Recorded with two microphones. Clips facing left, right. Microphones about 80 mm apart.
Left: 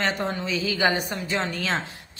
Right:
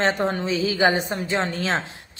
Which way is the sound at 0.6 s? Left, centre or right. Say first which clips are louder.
Right 3 dB; right.